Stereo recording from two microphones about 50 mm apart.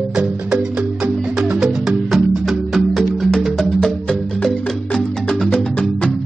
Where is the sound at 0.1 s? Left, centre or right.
Right.